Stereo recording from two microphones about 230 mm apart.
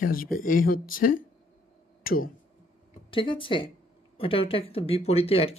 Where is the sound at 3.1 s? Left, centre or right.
Left.